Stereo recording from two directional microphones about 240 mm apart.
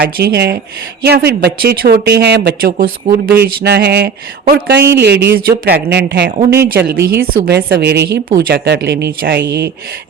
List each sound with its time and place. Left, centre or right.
0.0 s a woman's voice: right
6.5 s speech: centre
6.8 s a woman's voice: right